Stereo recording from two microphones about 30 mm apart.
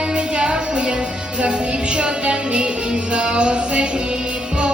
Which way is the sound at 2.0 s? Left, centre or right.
Right.